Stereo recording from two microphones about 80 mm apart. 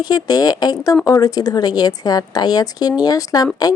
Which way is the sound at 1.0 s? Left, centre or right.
Left.